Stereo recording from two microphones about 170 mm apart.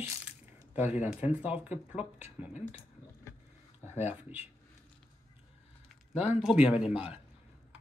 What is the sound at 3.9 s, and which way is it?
Speech, 10° right (ahead or behind).